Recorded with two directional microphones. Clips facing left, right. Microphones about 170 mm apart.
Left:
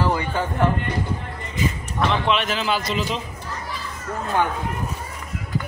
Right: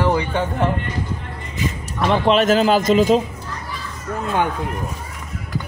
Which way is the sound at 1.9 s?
40° right (ahead or behind).